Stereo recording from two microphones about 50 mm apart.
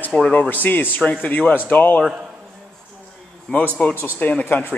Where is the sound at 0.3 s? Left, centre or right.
Left.